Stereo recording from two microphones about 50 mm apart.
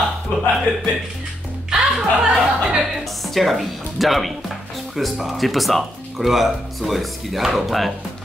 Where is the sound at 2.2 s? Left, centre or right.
Centre.